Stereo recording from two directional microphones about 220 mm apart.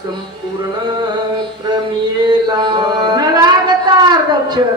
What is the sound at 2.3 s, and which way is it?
Mantra, 20° right (ahead or behind).